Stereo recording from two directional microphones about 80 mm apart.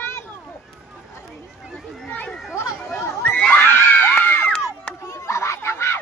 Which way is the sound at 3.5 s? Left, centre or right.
Left.